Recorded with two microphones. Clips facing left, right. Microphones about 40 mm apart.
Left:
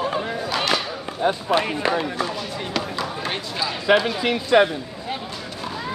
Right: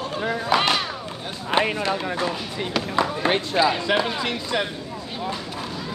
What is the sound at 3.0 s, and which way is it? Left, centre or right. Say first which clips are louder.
Speech: right 5 dB; right.